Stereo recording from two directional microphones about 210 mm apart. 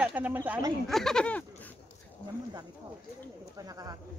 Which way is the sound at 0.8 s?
Centre (ahead or behind).